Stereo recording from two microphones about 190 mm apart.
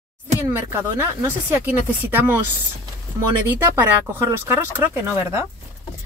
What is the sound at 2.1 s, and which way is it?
Speech, 10° right (ahead or behind).